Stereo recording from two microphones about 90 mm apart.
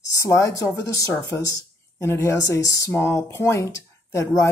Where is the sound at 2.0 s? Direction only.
30° left (ahead or behind).